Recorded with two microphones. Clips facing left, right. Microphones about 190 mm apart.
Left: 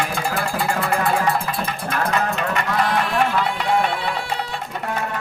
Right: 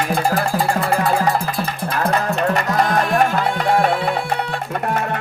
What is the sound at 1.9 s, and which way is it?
Music, 35° right (ahead or behind).